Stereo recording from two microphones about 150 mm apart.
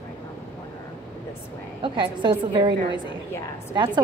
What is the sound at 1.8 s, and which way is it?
A woman's voice, 30° right (ahead or behind).